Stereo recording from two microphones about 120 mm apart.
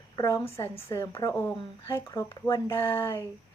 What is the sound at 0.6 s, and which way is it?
Speech, 25° left (ahead or behind).